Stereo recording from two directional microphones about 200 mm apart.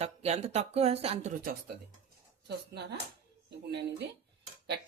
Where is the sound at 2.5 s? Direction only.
55° right (ahead or behind).